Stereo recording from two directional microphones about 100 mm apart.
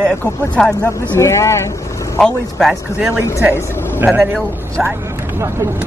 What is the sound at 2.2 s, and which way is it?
Speech, 5° left (ahead or behind).